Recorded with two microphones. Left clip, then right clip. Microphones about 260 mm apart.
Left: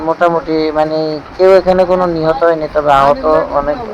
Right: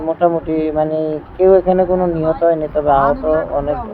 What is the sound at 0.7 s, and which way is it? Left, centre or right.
Speech, centre.